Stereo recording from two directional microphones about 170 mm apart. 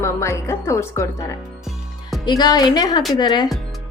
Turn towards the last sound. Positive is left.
turn(degrees=25)  # may be behind; listen again after turning